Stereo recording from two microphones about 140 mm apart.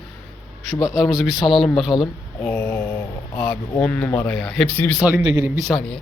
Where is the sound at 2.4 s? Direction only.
15° left (ahead or behind).